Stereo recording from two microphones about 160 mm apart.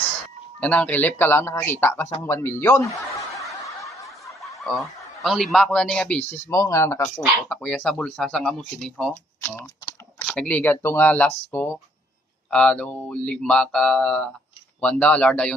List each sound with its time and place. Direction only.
0.6 s speech: 10° left (ahead or behind)
3.8 s snicker: 20° left (ahead or behind)
5.2 s speech: centre (ahead or behind)
6.5 s speech: 20° left (ahead or behind)
7.4 s speech: 5° left (ahead or behind)
9.4 s typing: 15° left (ahead or behind)
10.2 s speech: 5° left (ahead or behind)